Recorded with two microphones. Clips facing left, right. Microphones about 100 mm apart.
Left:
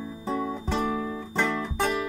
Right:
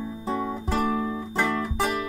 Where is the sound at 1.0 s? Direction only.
20° right (ahead or behind).